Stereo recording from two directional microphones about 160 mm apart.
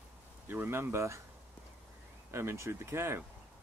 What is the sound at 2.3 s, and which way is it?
Speech, 15° right (ahead or behind).